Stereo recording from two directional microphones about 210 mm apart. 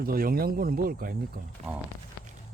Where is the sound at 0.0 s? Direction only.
45° right (ahead or behind).